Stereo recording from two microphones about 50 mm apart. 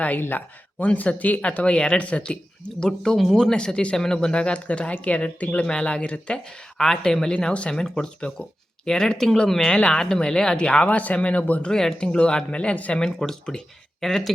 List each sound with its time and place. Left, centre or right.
0.2 s speech: left
0.8 s speech: left; by 2.0 s centre
2.0 s speech: left
6.7 s speech: centre; by 11.7 s left
11.7 s speech: centre
11.9 s speech: left
13.0 s speech: centre